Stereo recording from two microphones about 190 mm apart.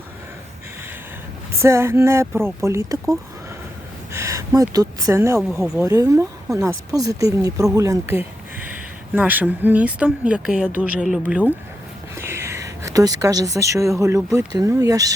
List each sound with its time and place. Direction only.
1.6 s a woman's voice: 15° right (ahead or behind)
5.8 s a woman's voice: 15° right (ahead or behind)
12.1 s a sound: 15° right (ahead or behind)
14.3 s a woman's voice: 15° right (ahead or behind)